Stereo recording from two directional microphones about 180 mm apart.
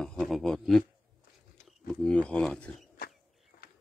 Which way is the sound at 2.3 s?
5° left (ahead or behind).